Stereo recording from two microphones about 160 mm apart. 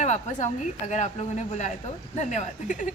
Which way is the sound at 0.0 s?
50° left (ahead or behind).